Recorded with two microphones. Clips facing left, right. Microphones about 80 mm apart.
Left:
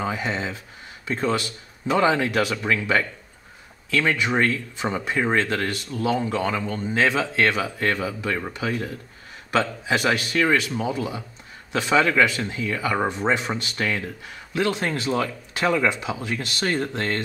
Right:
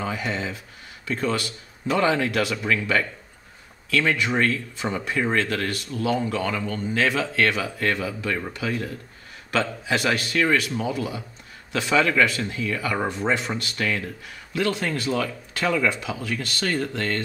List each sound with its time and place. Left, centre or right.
0.0 s speech: centre
2.1 s speech: centre
2.5 s speech: centre
4.2 s speech: centre
5.9 s speech: centre
6.2 s speech: centre